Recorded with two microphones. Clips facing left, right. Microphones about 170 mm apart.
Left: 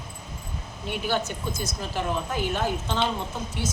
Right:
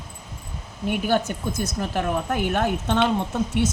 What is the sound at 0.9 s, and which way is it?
A woman's voice, 50° right (ahead or behind).